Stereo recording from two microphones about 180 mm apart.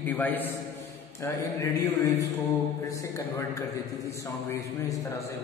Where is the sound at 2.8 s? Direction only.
15° left (ahead or behind).